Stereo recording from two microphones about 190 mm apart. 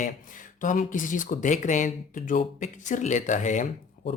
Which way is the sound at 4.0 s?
45° left (ahead or behind).